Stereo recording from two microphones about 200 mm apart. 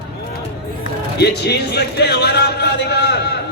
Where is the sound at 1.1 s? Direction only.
55° left (ahead or behind).